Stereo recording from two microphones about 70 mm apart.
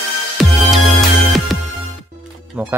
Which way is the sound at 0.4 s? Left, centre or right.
Centre.